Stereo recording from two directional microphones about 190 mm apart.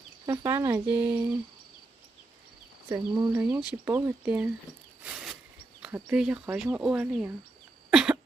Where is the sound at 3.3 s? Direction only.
10° right (ahead or behind).